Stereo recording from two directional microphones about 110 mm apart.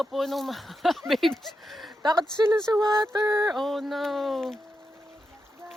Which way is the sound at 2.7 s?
35° right (ahead or behind).